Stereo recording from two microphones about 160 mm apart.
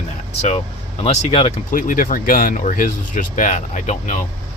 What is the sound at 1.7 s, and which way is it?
Speech, 60° left (ahead or behind).